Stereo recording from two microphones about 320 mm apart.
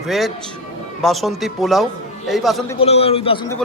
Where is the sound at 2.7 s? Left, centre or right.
Centre.